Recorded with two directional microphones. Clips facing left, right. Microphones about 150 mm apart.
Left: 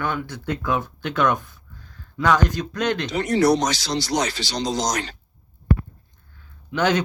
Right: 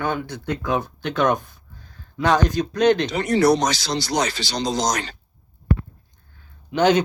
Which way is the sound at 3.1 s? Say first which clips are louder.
Right 1 dB; 90° right.